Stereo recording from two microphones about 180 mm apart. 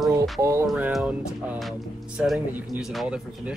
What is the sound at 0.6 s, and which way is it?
Speech, 5° right (ahead or behind).